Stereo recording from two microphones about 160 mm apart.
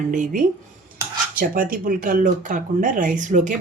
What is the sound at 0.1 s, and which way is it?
Speech, 55° right (ahead or behind).